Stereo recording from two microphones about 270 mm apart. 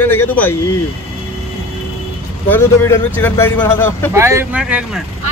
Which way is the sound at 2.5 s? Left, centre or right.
Centre.